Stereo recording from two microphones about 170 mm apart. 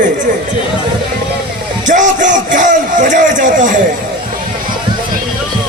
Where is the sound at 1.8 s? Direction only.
50° right (ahead or behind).